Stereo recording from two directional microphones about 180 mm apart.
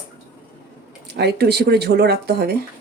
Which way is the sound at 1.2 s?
65° right (ahead or behind).